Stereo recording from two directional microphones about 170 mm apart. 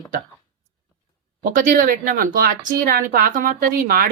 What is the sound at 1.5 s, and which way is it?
Speech, 50° right (ahead or behind).